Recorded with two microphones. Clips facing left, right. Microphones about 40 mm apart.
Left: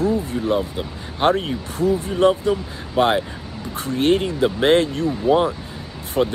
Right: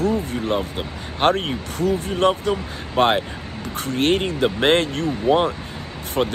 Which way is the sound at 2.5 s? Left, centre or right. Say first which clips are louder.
Left 1 dB; right.